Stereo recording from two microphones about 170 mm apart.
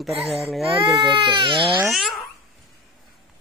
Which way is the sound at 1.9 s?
Centre (ahead or behind).